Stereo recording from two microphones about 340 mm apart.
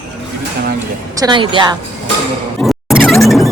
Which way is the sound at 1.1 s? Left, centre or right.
Centre.